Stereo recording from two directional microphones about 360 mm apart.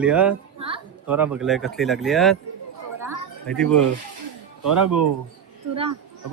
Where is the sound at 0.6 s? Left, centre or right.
Centre.